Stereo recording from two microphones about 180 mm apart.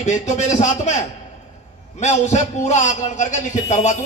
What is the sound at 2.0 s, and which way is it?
A man's voice, 40° left (ahead or behind).